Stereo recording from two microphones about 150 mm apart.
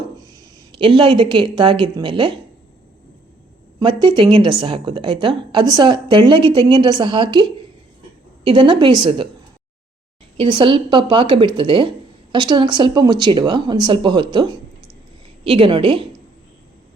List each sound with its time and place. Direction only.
0.3 s speech: 30° right (ahead or behind)
3.8 s speech: 30° right (ahead or behind)
10.3 s speech: 35° right (ahead or behind)